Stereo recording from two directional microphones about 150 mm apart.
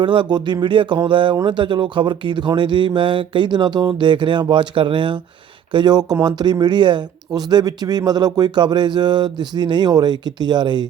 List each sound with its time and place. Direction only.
0.0 s speech: 35° right (ahead or behind)